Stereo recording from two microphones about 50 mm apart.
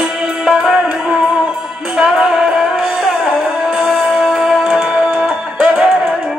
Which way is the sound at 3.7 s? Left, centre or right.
Centre.